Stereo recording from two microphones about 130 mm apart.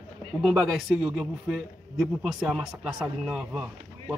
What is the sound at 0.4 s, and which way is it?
A man's voice, 5° right (ahead or behind).